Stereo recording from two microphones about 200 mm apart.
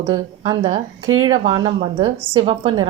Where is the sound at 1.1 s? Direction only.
90° right.